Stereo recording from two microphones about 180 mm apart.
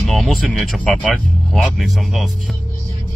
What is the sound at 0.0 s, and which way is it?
Speech, centre (ahead or behind).